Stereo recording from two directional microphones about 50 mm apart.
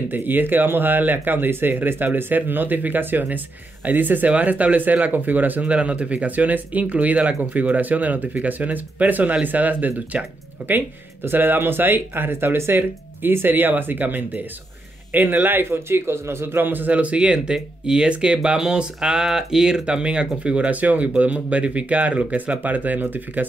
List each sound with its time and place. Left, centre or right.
0.1 s speech: right
5.7 s speech: right
11.2 s speech: right
15.7 s speech: right